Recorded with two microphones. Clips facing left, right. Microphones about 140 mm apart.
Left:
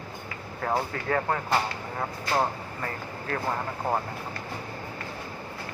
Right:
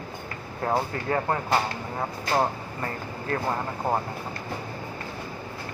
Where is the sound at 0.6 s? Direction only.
20° right (ahead or behind).